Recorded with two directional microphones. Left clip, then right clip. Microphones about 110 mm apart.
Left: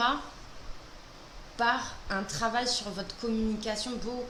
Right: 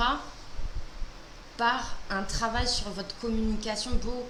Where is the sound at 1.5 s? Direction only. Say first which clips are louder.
Right 1 dB; 20° left (ahead or behind).